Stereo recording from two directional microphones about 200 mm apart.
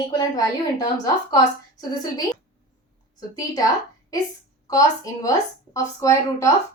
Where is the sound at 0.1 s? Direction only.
20° left (ahead or behind).